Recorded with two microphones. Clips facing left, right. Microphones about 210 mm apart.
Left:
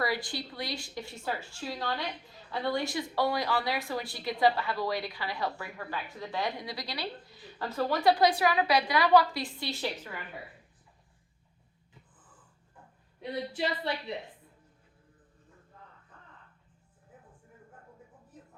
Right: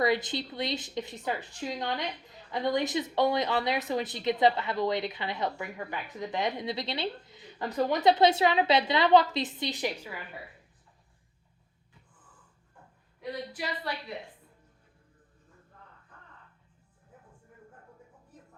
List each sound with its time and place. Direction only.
0.0 s speech: 20° right (ahead or behind)
13.5 s a woman's voice: 25° left (ahead or behind)